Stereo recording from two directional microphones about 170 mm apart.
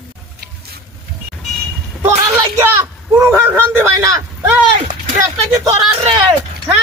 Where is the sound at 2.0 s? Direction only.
10° right (ahead or behind).